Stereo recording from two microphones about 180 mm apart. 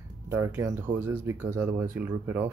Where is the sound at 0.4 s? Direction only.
15° right (ahead or behind).